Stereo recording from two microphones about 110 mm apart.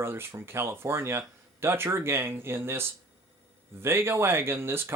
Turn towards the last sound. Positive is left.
turn(degrees=-20)  # may be behind; listen again after turning